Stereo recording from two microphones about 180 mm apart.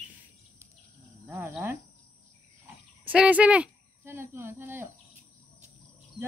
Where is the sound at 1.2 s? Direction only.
15° right (ahead or behind).